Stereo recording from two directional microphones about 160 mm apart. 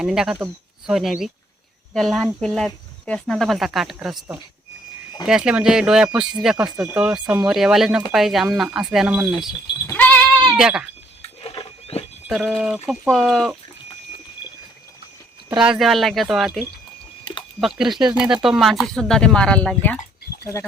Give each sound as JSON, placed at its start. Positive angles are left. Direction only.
{"t": 0.0, "sound": "speech", "side_deg": -5}
{"t": 9.8, "sound": "goat", "side_deg": 10}
{"t": 10.6, "sound": "speech", "side_deg": -5}
{"t": 11.2, "sound": "a sound", "side_deg": 35}
{"t": 12.3, "sound": "speech", "side_deg": 0}
{"t": 15.5, "sound": "speech", "side_deg": -5}
{"t": 17.6, "sound": "speech", "side_deg": 0}